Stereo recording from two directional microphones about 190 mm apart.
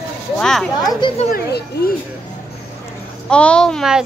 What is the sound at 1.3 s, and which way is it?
Speech, 55° left (ahead or behind).